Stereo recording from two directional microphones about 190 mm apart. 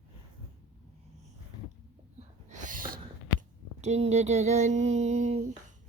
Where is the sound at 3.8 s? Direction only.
35° right (ahead or behind).